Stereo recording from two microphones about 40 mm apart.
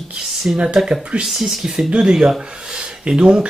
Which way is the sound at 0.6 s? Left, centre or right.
Right.